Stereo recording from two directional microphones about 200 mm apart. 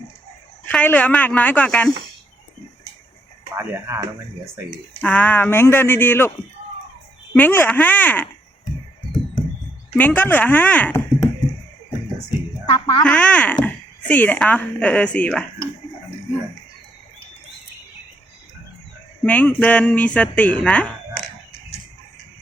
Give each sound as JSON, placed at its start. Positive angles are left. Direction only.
{"t": 0.6, "sound": "speech", "side_deg": 10}
{"t": 3.6, "sound": "speech", "side_deg": -10}
{"t": 4.9, "sound": "speech", "side_deg": 5}
{"t": 7.3, "sound": "speech", "side_deg": 10}
{"t": 9.9, "sound": "speech", "side_deg": 10}
{"t": 12.7, "sound": "speech", "side_deg": 25}
{"t": 13.1, "sound": "speech", "side_deg": 5}
{"t": 19.2, "sound": "speech", "side_deg": 10}